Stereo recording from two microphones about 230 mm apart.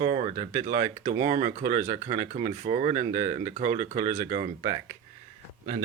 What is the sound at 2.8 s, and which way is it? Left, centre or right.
Speech, right.